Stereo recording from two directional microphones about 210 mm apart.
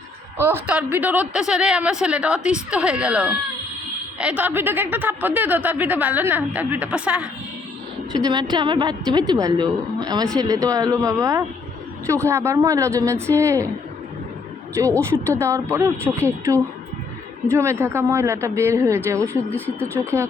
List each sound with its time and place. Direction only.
0.3 s a woman's voice: 10° right (ahead or behind)
8.1 s a woman's voice: 20° right (ahead or behind)
14.8 s a woman's voice: 15° right (ahead or behind)
19.3 s speech: 10° left (ahead or behind)
19.9 s a woman's voice: 10° right (ahead or behind)